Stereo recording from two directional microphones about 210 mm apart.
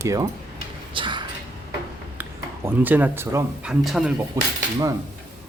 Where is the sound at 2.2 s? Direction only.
10° right (ahead or behind).